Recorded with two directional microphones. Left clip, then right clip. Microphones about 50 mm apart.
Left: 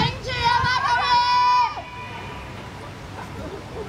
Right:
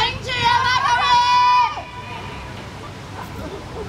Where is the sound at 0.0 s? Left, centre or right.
Right.